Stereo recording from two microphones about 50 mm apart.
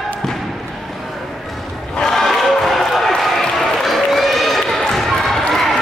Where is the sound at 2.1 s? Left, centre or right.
Centre.